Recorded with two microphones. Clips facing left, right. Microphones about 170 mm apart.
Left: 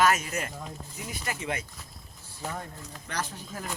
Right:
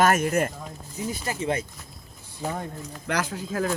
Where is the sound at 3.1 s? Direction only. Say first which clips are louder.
Right 8 dB; 90° right.